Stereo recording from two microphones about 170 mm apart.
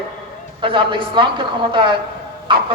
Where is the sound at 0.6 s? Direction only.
30° right (ahead or behind).